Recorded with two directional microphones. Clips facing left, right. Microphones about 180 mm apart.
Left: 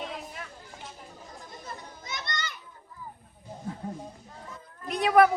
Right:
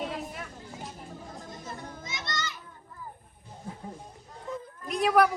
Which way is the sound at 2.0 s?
55° left (ahead or behind).